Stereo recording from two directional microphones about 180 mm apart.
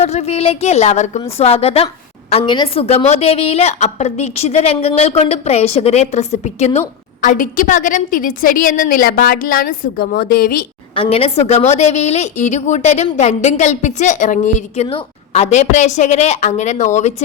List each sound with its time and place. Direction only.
0.0 s a woman's voice: 35° left (ahead or behind); by 10.7 s 55° left (ahead or behind)
10.9 s a woman's voice: 30° left (ahead or behind)